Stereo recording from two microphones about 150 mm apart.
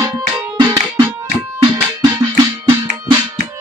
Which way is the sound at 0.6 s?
25° right (ahead or behind).